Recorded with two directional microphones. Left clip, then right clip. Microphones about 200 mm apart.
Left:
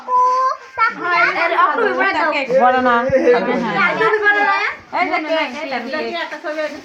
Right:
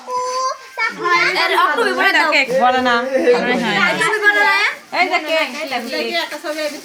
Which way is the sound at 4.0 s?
65° right (ahead or behind).